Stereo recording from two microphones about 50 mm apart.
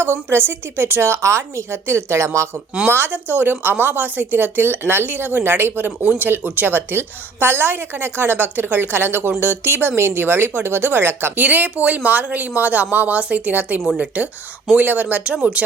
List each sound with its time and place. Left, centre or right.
0.0 s speech: right
1.2 s a woman's voice: right
3.1 s speech: right
11.3 s speech: right